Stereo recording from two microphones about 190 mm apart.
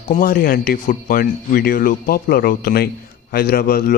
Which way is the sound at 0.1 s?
45° left (ahead or behind).